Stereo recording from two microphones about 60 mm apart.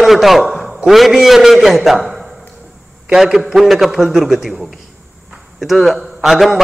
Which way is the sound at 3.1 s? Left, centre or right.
Centre.